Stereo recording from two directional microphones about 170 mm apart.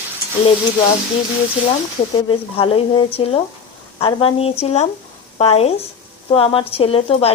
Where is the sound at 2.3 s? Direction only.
35° left (ahead or behind).